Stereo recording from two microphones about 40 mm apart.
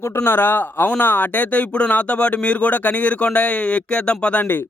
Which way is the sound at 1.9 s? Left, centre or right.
Left.